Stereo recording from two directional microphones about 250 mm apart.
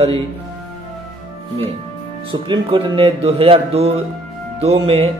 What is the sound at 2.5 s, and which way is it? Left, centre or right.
Speech, centre.